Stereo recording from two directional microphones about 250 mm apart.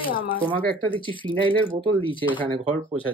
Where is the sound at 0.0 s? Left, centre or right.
Centre.